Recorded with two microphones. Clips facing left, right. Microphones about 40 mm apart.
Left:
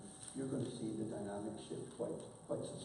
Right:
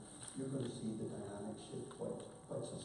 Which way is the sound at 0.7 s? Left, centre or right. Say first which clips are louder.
Left 2 dB; centre.